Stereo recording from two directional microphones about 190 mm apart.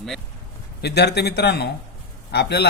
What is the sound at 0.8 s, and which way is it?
Speech, 60° left (ahead or behind).